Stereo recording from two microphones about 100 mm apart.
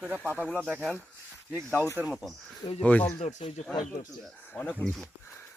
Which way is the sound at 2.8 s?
15° left (ahead or behind).